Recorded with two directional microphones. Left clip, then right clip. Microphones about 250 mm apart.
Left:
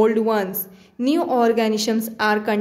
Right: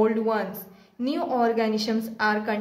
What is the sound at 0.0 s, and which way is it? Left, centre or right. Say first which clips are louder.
A woman's voice: left 5 dB; left.